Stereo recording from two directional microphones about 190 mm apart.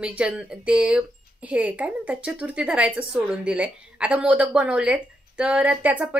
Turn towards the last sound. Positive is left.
turn(degrees=-5)  # may be behind; listen again after turning